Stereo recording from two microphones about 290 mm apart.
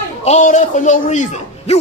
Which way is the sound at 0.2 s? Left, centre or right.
Left.